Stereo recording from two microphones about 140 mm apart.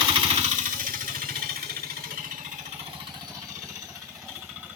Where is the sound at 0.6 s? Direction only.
70° right (ahead or behind); by 1.8 s 90° right.